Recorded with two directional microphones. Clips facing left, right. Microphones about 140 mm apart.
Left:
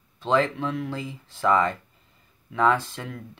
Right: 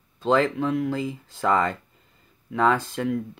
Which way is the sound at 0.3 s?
35° right (ahead or behind).